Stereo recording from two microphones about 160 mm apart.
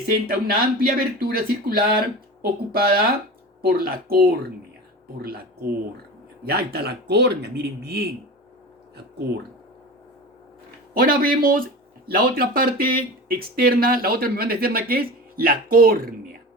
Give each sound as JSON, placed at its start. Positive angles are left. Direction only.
{"t": 0.1, "sound": "speech", "side_deg": -70}
{"t": 10.9, "sound": "speech", "side_deg": -65}